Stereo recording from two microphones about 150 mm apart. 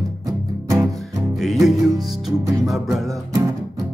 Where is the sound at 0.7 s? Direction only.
20° right (ahead or behind).